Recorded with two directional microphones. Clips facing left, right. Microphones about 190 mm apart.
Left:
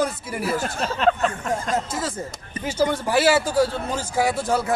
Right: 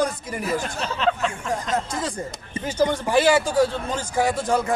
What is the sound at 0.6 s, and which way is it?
Speech, 45° left (ahead or behind).